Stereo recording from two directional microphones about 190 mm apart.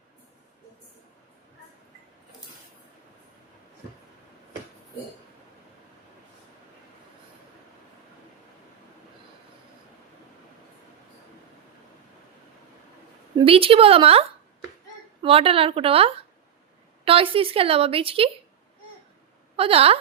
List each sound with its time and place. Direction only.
13.4 s a woman's voice: 30° right (ahead or behind)
19.5 s a woman's voice: 30° right (ahead or behind)